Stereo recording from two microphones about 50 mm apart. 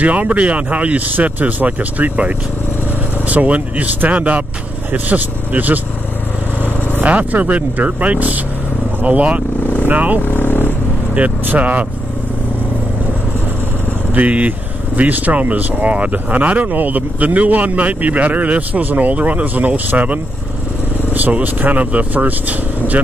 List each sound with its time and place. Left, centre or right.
0.0 s speech: right
10.2 s vehicle: left
11.1 s speech: right
14.1 s speech: right